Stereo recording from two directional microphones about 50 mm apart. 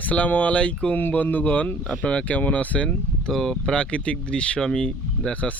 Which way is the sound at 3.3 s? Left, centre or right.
Centre.